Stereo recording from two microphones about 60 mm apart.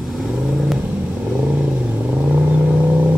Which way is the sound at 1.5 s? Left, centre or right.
Centre.